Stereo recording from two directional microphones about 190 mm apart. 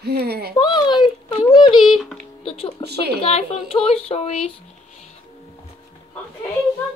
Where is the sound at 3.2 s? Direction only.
30° left (ahead or behind).